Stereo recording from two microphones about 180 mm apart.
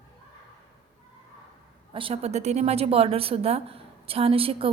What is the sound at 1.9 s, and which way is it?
A woman's voice, 30° right (ahead or behind).